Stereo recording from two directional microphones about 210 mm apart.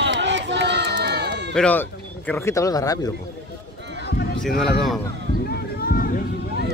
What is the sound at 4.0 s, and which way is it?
Run, 50° left (ahead or behind).